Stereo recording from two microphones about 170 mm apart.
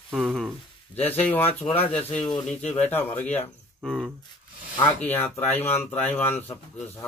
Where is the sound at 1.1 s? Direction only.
10° left (ahead or behind).